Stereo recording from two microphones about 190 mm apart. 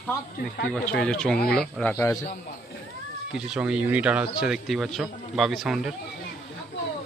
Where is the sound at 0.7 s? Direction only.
5° left (ahead or behind).